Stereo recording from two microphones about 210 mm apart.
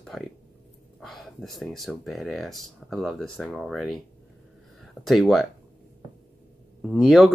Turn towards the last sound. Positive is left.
turn(degrees=0)  # may be behind; listen again after turning